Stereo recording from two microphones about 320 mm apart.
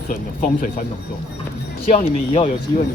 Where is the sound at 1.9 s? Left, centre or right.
Centre.